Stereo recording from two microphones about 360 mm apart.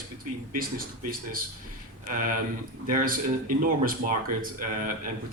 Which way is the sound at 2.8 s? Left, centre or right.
Right.